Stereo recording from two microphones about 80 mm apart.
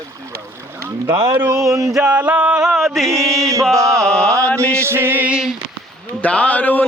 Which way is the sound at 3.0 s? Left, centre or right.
Right.